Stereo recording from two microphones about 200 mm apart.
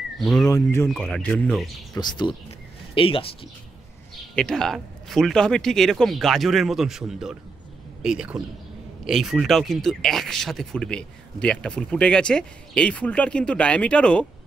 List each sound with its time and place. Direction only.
0.2 s speech: centre (ahead or behind)
0.5 s speech: 15° left (ahead or behind)
0.8 s speech: centre (ahead or behind)
2.0 s speech: 20° left (ahead or behind)
4.4 s speech: 5° left (ahead or behind)